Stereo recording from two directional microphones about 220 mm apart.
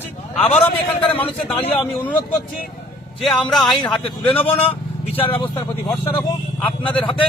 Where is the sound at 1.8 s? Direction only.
5° left (ahead or behind).